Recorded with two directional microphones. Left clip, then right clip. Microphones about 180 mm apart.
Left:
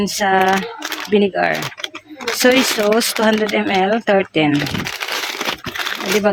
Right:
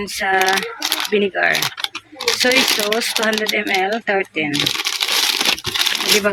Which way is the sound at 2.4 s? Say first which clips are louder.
Left 3 dB; 45° left (ahead or behind).